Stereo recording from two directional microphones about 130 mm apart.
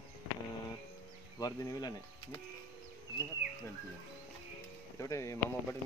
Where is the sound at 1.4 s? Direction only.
30° left (ahead or behind).